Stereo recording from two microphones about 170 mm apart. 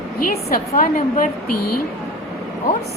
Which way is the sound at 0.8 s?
55° left (ahead or behind).